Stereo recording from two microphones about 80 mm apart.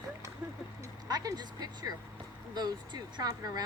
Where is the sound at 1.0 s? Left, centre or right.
Right.